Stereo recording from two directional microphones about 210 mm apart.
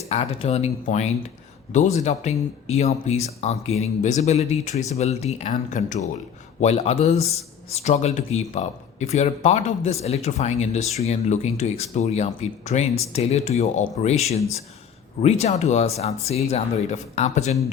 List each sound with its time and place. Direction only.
0.1 s speech: 30° left (ahead or behind)